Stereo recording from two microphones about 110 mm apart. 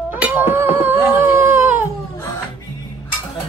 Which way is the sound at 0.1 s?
15° right (ahead or behind).